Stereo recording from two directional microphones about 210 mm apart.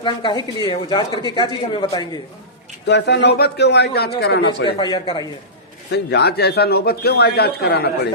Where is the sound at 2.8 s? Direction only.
55° left (ahead or behind).